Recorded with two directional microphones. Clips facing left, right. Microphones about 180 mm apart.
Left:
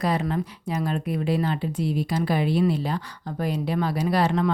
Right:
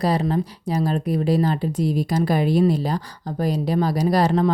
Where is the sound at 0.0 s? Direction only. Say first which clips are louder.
Right 4 dB; 35° right (ahead or behind).